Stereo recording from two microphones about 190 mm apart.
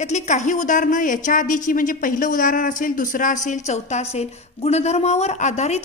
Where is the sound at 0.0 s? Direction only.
35° left (ahead or behind).